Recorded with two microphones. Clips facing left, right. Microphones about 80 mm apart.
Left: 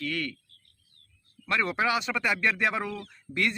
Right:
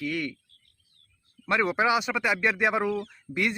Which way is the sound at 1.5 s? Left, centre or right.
Centre.